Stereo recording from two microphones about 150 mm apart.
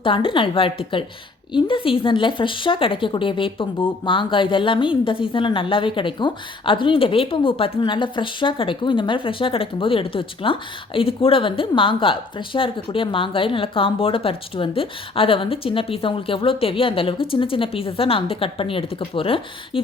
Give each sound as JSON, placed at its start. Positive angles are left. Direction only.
{"t": 0.0, "sound": "a woman's voice", "side_deg": 35}